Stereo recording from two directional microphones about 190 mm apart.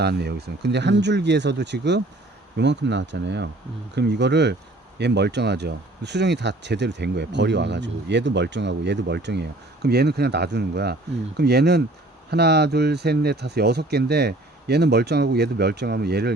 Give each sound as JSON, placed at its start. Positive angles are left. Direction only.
{"t": 0.0, "sound": "speech", "side_deg": -60}